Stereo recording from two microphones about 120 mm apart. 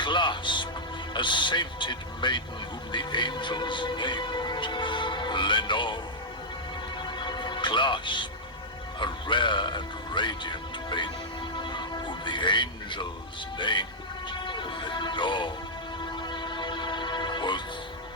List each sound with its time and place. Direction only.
0.0 s music: 40° left (ahead or behind)
1.1 s speech: 40° left (ahead or behind)
7.0 s music: 40° left (ahead or behind)
9.0 s speech: 40° left (ahead or behind)
11.6 s music: 40° left (ahead or behind)
13.6 s speech: 40° left (ahead or behind)
14.3 s music: 40° left (ahead or behind)